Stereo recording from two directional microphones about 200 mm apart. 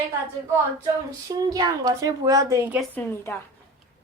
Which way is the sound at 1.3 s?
20° right (ahead or behind).